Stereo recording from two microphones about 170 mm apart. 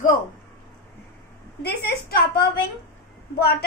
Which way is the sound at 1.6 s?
65° left (ahead or behind).